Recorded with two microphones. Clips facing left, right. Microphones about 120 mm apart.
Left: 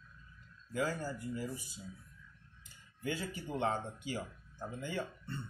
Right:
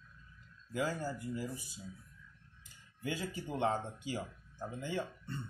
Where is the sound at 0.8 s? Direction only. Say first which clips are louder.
Right 2 dB; 15° right (ahead or behind).